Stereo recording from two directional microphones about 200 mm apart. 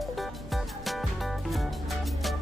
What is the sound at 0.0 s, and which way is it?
Music, centre (ahead or behind).